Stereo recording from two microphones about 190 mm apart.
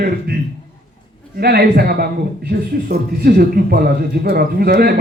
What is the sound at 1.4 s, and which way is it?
A man's voice, 55° right (ahead or behind).